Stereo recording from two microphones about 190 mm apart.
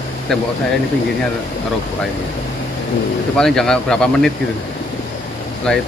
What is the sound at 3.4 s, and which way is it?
Speech, 5° left (ahead or behind).